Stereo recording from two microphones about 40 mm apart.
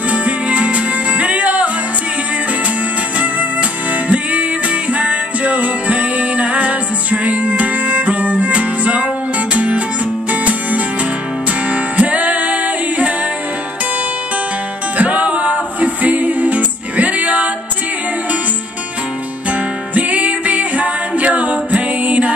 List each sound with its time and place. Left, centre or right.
0.1 s music: right
4.1 s music: right
11.7 s music: right
15.0 s music: right
19.9 s music: right